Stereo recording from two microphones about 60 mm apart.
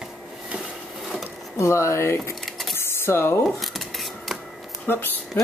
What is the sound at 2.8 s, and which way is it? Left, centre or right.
Computer keyboard, left.